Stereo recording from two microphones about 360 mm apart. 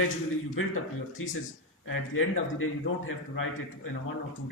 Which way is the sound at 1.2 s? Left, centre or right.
Left.